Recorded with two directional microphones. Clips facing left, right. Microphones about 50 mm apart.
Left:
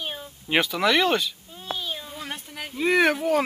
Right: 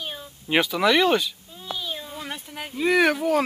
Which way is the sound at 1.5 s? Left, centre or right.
Left.